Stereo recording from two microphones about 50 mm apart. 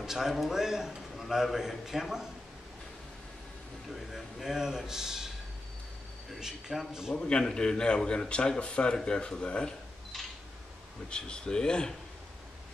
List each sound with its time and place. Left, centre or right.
0.0 s a man's voice: centre
3.9 s a man's voice: centre
6.4 s a man's voice: centre
7.2 s speech: centre
11.1 s speech: centre